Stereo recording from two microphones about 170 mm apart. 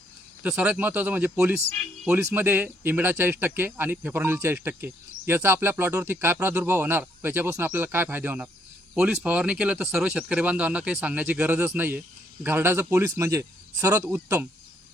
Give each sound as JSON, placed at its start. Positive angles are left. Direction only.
{"t": 0.4, "sound": "speech", "side_deg": -10}